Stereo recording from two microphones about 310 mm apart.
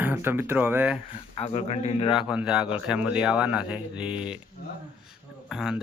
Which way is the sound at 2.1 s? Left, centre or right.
Centre.